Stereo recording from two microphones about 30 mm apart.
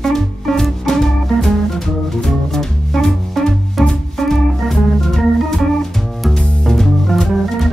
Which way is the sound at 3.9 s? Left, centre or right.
Centre.